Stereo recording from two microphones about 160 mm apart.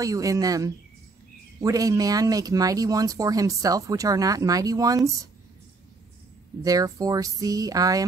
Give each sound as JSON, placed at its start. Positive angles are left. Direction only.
{"t": 0.0, "sound": "speech", "side_deg": -20}
{"t": 6.6, "sound": "speech", "side_deg": -20}